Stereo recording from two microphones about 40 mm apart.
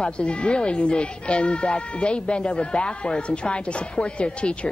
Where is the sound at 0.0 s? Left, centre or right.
Left.